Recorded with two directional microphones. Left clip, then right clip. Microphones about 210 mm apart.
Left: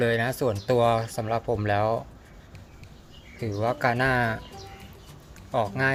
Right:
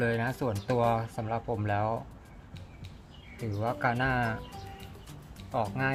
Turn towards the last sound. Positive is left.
turn(degrees=15)  # may be behind; listen again after turning